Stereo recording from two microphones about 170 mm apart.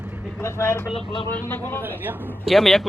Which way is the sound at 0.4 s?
15° left (ahead or behind).